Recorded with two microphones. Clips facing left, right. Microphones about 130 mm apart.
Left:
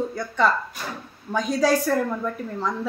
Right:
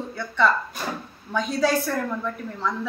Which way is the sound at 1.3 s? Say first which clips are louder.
Left 2 dB; 40° left (ahead or behind).